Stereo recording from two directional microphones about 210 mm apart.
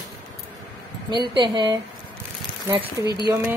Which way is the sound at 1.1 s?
20° right (ahead or behind).